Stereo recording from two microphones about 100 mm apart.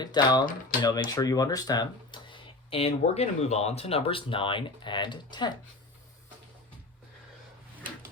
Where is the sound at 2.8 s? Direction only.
90° left; by 5.5 s 50° left (ahead or behind).